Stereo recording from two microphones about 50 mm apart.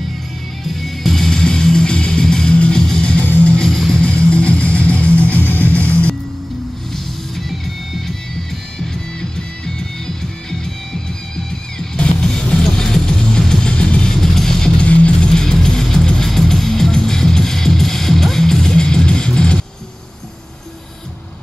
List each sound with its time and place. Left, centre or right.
0.7 s music: centre; by 3.3 s left
3.4 s music: centre
3.9 s music: left
6.9 s music: centre
11.8 s music: centre
14.1 s music: centre
14.8 s music: left